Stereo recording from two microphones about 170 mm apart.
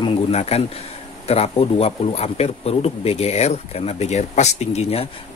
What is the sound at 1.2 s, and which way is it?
Speech, 35° left (ahead or behind).